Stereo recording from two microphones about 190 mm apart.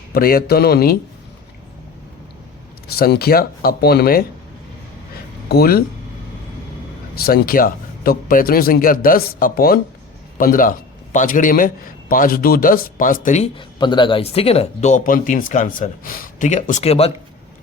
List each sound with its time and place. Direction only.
0.1 s a man's voice: 50° left (ahead or behind)
2.8 s a man's voice: 55° left (ahead or behind)
5.5 s a man's voice: 55° left (ahead or behind)
7.2 s a man's voice: 55° left (ahead or behind); by 13.7 s 35° left (ahead or behind)
13.7 s speech: 25° left (ahead or behind)